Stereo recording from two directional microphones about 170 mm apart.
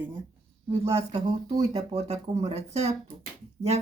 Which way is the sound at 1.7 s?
35° right (ahead or behind).